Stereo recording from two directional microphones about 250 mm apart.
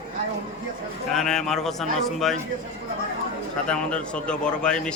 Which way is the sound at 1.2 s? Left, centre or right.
Centre.